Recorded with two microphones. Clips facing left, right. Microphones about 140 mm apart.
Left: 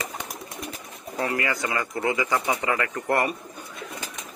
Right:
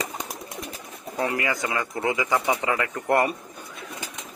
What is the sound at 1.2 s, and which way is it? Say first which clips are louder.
Speech: right 1 dB; 20° right (ahead or behind).